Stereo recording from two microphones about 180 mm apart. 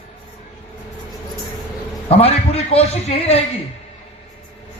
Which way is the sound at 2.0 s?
35° left (ahead or behind).